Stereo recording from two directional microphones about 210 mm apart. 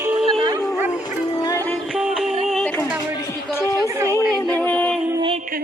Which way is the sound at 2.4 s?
5° left (ahead or behind).